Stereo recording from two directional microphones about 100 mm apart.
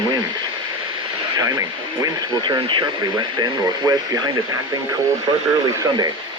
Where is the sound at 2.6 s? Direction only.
50° right (ahead or behind).